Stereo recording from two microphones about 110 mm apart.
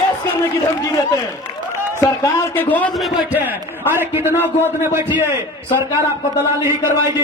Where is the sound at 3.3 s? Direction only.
15° right (ahead or behind).